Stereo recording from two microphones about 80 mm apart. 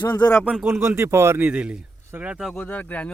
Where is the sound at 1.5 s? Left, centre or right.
Centre.